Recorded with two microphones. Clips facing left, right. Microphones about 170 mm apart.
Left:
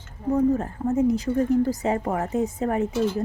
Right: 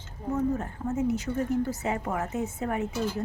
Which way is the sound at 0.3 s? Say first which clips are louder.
Left 7 dB; 35° left (ahead or behind).